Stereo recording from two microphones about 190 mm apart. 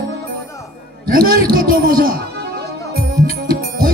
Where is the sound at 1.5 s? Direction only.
50° right (ahead or behind).